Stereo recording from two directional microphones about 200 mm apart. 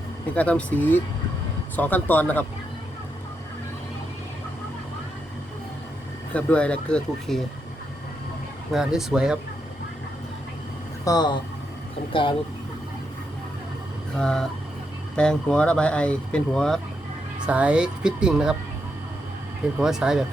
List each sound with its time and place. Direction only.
0.3 s speech: 5° left (ahead or behind)
6.3 s speech: 5° left (ahead or behind)
8.7 s speech: centre (ahead or behind)
11.0 s speech: 20° left (ahead or behind)
14.2 s speech: 5° left (ahead or behind)
19.8 s speech: 5° right (ahead or behind)